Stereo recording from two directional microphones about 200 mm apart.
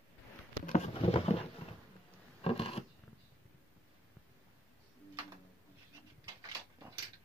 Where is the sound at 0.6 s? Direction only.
35° left (ahead or behind).